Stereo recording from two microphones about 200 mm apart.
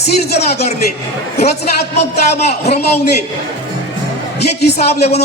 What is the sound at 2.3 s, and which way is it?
Speech, 35° left (ahead or behind).